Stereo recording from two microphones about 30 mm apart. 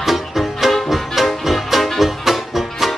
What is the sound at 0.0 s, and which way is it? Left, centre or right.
Music, centre.